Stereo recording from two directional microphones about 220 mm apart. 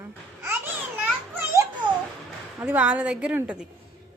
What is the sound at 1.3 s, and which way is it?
Children playing, 10° right (ahead or behind).